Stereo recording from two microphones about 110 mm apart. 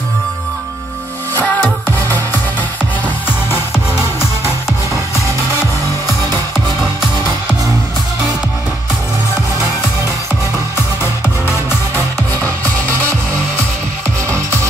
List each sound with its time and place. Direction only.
1.4 s music: 15° left (ahead or behind)